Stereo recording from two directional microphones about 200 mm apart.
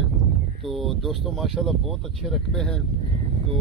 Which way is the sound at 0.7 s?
Centre (ahead or behind).